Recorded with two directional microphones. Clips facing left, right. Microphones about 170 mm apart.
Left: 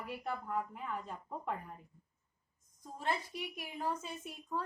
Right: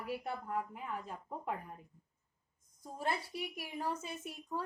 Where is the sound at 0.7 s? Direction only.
10° right (ahead or behind).